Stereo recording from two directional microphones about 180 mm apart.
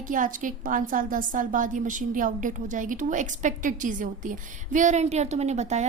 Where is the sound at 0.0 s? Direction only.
50° right (ahead or behind).